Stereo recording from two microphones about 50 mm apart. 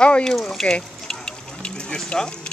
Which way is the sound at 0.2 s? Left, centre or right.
Centre.